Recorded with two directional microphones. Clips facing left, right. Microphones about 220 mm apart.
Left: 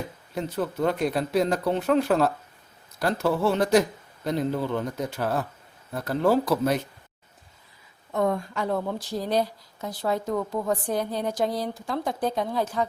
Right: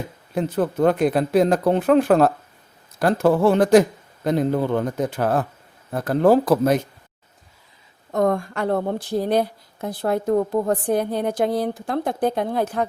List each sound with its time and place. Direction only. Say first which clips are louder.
0.3 s speech: right 7 dB; 50° right (ahead or behind)
8.1 s speech: right 5 dB; 45° right (ahead or behind)
8.4 s speech: right 5 dB; 65° right (ahead or behind)